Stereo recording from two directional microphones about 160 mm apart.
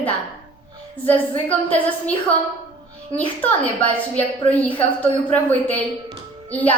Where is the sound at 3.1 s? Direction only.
35° left (ahead or behind).